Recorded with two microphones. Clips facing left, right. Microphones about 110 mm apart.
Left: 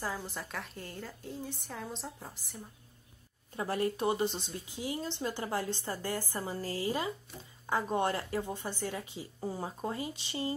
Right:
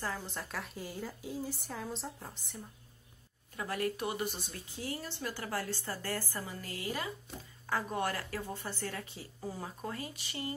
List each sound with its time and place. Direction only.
0.3 s a woman's voice: centre (ahead or behind)
3.5 s a woman's voice: 30° left (ahead or behind)
6.4 s a woman's voice: 30° left (ahead or behind)